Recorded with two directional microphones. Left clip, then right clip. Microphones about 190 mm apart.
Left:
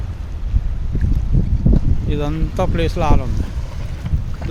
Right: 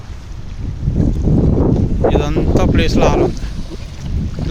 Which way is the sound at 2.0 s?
5° right (ahead or behind).